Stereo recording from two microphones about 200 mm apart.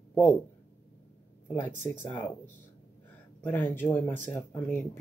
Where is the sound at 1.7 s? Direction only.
40° right (ahead or behind).